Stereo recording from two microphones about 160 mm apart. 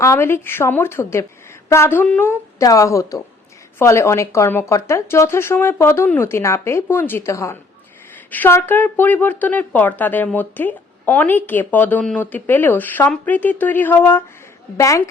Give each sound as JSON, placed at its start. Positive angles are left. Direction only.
{"t": 0.0, "sound": "a woman's voice", "side_deg": 15}